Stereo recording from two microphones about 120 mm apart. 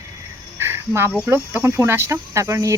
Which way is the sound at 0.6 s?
20° right (ahead or behind).